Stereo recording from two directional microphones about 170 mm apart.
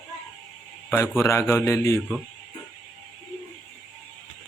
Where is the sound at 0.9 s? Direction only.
15° left (ahead or behind).